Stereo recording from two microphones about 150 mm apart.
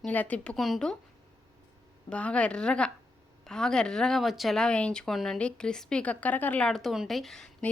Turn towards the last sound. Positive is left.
turn(degrees=5)  # may be behind; listen again after turning